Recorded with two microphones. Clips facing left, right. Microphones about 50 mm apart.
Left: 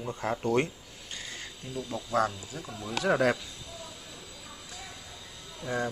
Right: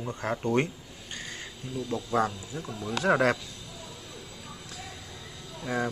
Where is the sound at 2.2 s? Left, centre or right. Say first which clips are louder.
Even; centre.